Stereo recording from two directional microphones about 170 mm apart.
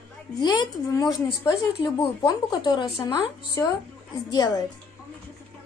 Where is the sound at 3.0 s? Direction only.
20° left (ahead or behind).